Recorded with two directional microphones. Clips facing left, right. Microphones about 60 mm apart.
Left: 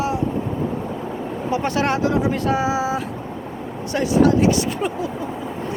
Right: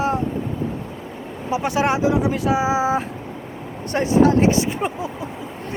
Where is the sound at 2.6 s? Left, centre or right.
Right.